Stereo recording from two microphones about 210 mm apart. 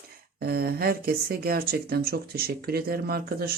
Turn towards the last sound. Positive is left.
turn(degrees=-45)  # may be behind; listen again after turning